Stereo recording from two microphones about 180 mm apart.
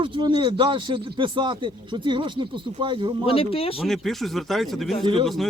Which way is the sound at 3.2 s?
30° left (ahead or behind).